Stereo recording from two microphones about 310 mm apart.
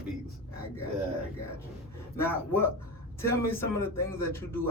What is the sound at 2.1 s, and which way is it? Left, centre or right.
A man's voice, centre.